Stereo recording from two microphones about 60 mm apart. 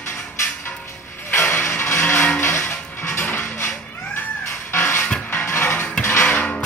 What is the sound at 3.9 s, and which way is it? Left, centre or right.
Music, left.